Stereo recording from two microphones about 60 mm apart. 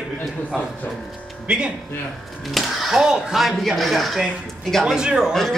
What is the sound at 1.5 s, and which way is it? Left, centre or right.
Speech, centre.